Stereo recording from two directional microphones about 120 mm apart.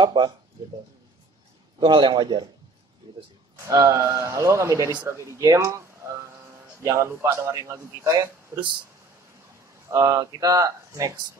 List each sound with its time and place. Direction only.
0.0 s a man's voice: 40° right (ahead or behind)
1.8 s a man's voice: 40° right (ahead or behind)
9.8 s a man's voice: 25° right (ahead or behind)